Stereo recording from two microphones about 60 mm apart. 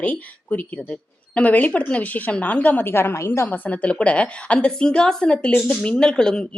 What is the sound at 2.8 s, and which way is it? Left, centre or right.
Speech, left.